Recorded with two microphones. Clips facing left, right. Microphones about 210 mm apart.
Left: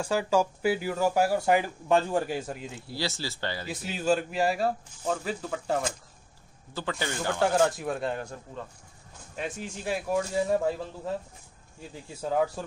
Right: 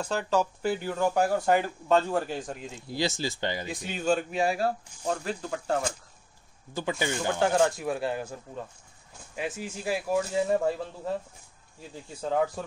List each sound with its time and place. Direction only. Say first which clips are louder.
0.0 s speech: left 2 dB; 10° left (ahead or behind)
2.9 s speech: right 4 dB; 15° right (ahead or behind)
3.6 s speech: left 2 dB; 5° left (ahead or behind)
6.7 s speech: right 3 dB; 15° right (ahead or behind)
7.3 s speech: left 1 dB; centre (ahead or behind)
12.2 s speech: even; 5° left (ahead or behind)